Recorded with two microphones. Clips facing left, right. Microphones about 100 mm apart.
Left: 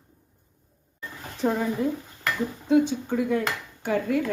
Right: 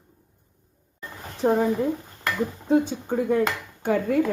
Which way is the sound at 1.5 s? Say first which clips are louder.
Right 4 dB; 40° right (ahead or behind).